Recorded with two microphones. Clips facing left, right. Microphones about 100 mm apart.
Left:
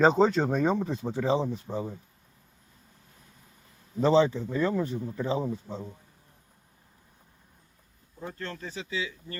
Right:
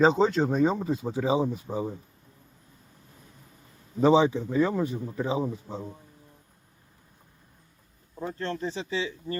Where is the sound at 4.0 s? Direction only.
10° right (ahead or behind).